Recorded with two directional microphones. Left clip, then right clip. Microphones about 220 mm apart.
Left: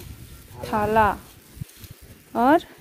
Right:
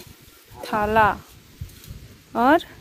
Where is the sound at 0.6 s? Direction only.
Centre (ahead or behind).